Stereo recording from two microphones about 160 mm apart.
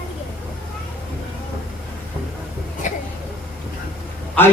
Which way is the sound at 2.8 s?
55° left (ahead or behind).